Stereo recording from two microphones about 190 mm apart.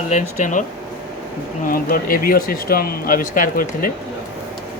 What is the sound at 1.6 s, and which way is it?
Speech, 50° left (ahead or behind).